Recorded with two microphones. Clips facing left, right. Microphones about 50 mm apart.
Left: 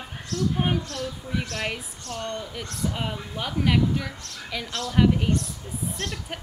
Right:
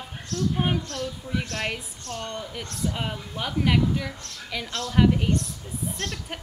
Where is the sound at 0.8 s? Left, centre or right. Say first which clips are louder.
Even; right.